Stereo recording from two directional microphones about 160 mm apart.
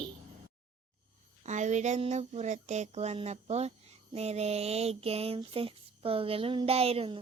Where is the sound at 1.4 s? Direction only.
50° right (ahead or behind).